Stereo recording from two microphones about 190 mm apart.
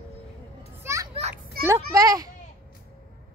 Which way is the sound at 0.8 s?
15° right (ahead or behind).